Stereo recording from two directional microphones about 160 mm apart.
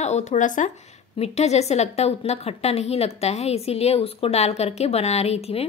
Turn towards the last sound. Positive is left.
turn(degrees=40)  # may be behind; listen again after turning